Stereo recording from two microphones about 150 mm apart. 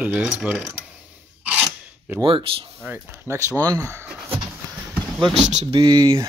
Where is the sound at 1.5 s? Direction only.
10° right (ahead or behind).